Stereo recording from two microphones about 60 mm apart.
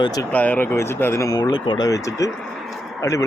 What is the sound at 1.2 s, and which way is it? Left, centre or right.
Speech, left.